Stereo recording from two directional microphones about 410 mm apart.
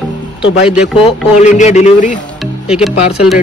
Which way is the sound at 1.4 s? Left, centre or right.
Centre.